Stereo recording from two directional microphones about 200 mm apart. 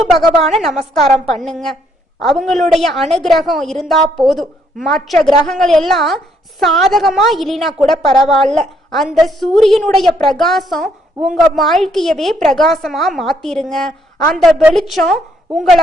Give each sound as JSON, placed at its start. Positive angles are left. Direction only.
{"t": 0.0, "sound": "a woman's voice", "side_deg": 0}
{"t": 8.0, "sound": "a woman's voice", "side_deg": 20}
{"t": 8.3, "sound": "a woman's voice", "side_deg": 0}